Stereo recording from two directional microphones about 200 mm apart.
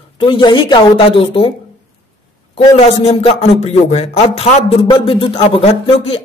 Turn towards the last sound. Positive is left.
turn(degrees=30)  # may be behind; listen again after turning